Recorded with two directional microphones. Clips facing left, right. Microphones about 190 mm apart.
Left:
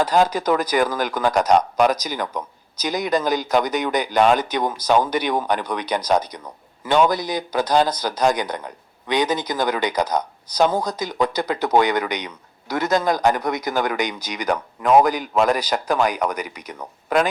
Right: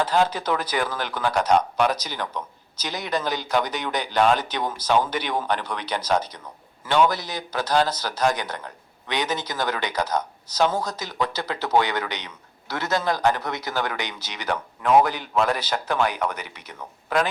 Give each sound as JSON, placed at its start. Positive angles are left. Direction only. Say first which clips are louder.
{"t": 0.3, "sound": "speech", "louder": "left 6 dB", "side_deg": 45}
{"t": 0.9, "sound": "speech", "louder": "left 5 dB", "side_deg": 10}